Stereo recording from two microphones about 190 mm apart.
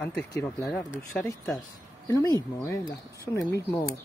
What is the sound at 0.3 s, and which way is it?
Speech, 15° left (ahead or behind).